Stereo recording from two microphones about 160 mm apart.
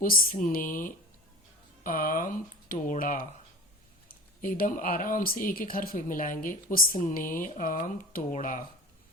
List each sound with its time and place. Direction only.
0.0 s speech: 60° left (ahead or behind)
4.4 s speech: 60° left (ahead or behind)